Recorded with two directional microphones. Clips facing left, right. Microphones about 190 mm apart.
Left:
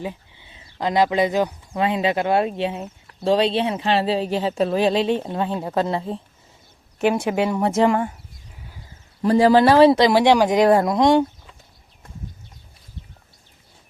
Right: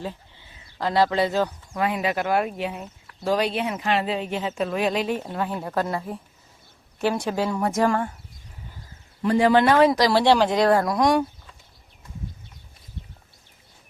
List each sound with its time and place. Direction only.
0.0 s speech: 15° left (ahead or behind)
7.3 s speech: 20° left (ahead or behind)
9.2 s speech: 35° left (ahead or behind)
10.1 s speech: 15° left (ahead or behind)